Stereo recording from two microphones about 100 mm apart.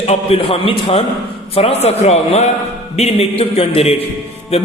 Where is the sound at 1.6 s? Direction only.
85° left.